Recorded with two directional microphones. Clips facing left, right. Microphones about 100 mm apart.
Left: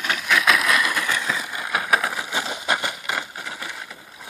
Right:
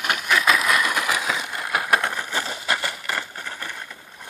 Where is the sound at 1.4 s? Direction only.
Centre (ahead or behind).